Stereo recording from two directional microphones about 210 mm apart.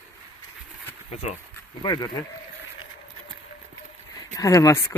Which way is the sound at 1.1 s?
30° left (ahead or behind).